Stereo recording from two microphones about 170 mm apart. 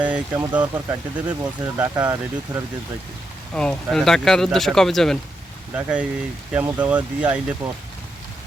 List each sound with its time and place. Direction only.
0.0 s speech: 10° right (ahead or behind)
3.5 s speech: 5° left (ahead or behind)